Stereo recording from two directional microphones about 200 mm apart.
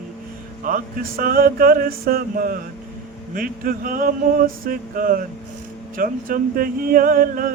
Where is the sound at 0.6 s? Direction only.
45° right (ahead or behind).